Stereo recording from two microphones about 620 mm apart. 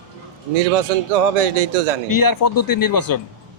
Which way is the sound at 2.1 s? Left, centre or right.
Left.